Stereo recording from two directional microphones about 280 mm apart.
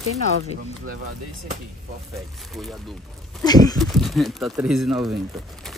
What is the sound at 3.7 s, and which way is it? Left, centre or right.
Speech, centre.